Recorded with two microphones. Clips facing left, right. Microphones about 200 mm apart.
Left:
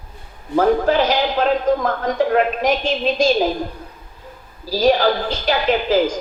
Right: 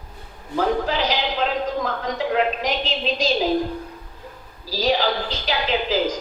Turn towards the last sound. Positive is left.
turn(degrees=50)  # may be behind; listen again after turning